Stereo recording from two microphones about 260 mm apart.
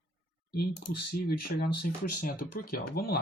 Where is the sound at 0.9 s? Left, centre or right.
Left.